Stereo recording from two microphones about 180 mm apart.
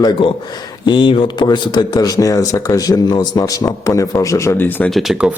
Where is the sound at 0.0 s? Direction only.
25° left (ahead or behind).